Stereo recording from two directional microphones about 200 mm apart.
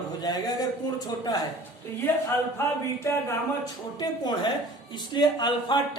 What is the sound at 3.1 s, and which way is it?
A woman's voice, 15° left (ahead or behind).